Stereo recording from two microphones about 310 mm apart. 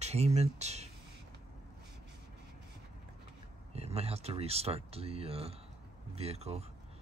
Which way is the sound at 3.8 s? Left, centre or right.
Centre.